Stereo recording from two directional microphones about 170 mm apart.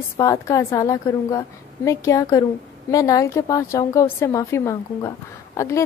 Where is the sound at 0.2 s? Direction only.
20° left (ahead or behind).